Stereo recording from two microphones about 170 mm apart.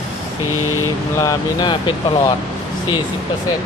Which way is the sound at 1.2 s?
20° left (ahead or behind).